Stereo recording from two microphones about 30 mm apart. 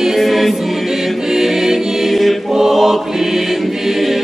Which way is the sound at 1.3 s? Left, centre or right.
Centre.